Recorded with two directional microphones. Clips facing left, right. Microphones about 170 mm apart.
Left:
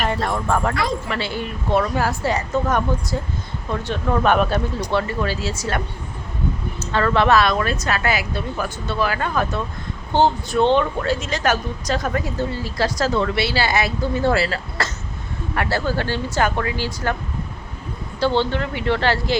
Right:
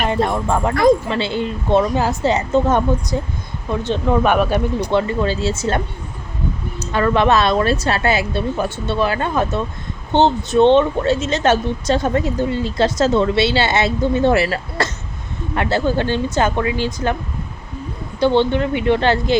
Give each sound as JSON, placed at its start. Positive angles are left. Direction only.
{"t": 0.0, "sound": "speech", "side_deg": -20}
{"t": 6.7, "sound": "speech", "side_deg": -15}
{"t": 18.2, "sound": "speech", "side_deg": -20}